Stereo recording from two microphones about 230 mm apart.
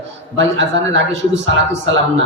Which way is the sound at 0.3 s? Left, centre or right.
Right.